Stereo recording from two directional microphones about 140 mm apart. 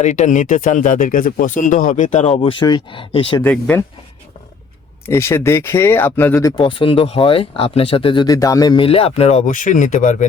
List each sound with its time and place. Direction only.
0.0 s speech: 60° left (ahead or behind)
2.5 s speech: 35° left (ahead or behind)
3.4 s speech: 15° left (ahead or behind)
5.0 s speech: 20° left (ahead or behind)
6.6 s speech: 35° left (ahead or behind)
9.5 s speech: 65° left (ahead or behind)